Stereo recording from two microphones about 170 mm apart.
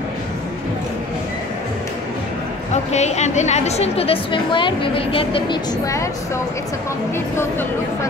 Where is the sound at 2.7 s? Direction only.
40° left (ahead or behind).